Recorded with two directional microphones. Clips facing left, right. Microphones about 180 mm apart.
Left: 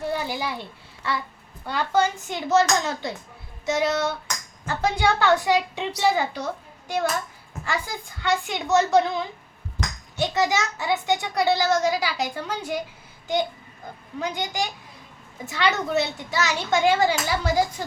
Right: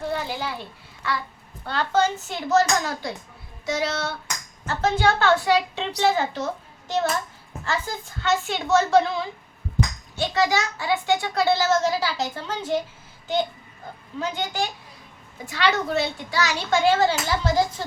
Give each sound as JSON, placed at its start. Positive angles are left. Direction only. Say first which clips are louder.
{"t": 0.1, "sound": "a sound", "louder": "left 1 dB", "side_deg": 10}
{"t": 1.6, "sound": "a child's voice", "louder": "even", "side_deg": 10}
{"t": 10.2, "sound": "a child's voice", "louder": "even", "side_deg": 20}
{"t": 14.2, "sound": "a child's voice", "louder": "right 1 dB", "side_deg": 15}